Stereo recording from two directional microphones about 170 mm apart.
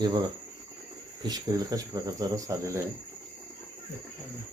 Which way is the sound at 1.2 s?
25° right (ahead or behind).